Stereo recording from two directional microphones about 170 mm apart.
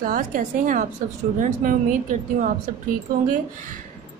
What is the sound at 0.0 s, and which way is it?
A woman's voice, 55° right (ahead or behind).